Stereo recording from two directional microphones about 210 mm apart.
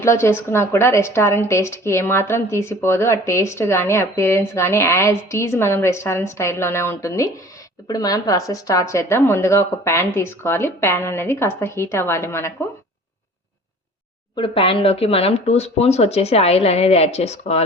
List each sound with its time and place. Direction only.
0.0 s a woman's voice: 10° left (ahead or behind)
14.3 s speech: 25° left (ahead or behind)